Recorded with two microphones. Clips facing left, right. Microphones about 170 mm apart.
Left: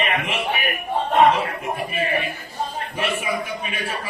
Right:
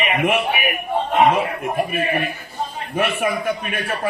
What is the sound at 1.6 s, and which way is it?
A man's voice, 55° right (ahead or behind).